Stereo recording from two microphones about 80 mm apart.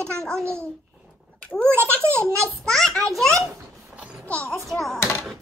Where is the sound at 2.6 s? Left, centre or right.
Centre.